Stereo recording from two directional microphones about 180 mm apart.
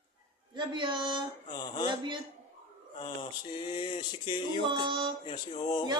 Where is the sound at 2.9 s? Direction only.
25° left (ahead or behind).